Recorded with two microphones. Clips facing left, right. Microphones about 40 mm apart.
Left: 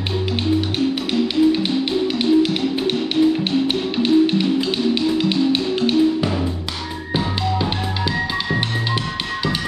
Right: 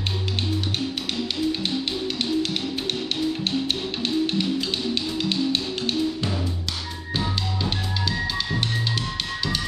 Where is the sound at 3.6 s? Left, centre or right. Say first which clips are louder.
Left 8 dB; centre.